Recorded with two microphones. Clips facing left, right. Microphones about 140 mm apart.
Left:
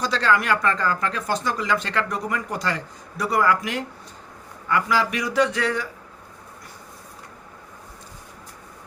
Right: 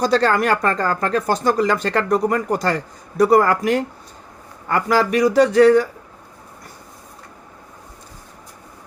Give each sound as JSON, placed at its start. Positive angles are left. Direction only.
{"t": 0.0, "sound": "speech", "side_deg": -45}